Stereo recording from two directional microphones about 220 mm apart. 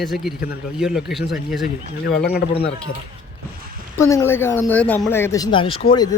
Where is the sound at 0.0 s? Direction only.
Centre (ahead or behind).